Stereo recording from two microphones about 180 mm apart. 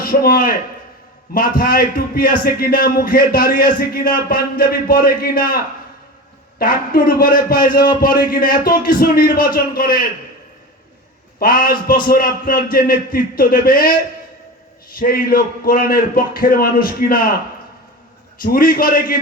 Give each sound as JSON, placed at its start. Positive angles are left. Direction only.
{"t": 0.0, "sound": "a man's voice", "side_deg": 55}
{"t": 6.6, "sound": "a man's voice", "side_deg": 55}
{"t": 11.3, "sound": "a man's voice", "side_deg": 55}
{"t": 14.9, "sound": "a man's voice", "side_deg": 55}
{"t": 18.4, "sound": "a man's voice", "side_deg": 55}